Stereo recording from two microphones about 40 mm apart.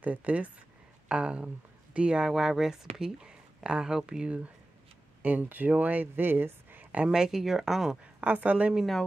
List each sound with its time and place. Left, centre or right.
0.0 s a woman's voice: right
1.0 s speech: right
2.2 s speech: centre
5.2 s speech: right
7.1 s speech: centre
8.2 s a woman's voice: right